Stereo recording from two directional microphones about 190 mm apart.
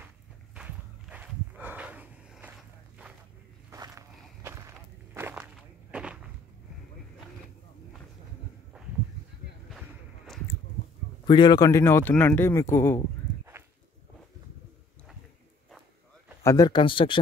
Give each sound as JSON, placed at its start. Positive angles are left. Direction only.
{"t": 0.6, "sound": "walk", "side_deg": -5}
{"t": 3.7, "sound": "walk", "side_deg": -20}
{"t": 9.7, "sound": "a sound", "side_deg": 0}
{"t": 11.2, "sound": "speech", "side_deg": 25}
{"t": 16.4, "sound": "speech", "side_deg": 20}